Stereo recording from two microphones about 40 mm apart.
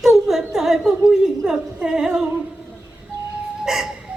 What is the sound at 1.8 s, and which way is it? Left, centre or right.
Speech, centre.